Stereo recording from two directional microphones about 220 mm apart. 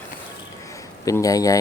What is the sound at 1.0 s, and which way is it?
Speech, 15° left (ahead or behind).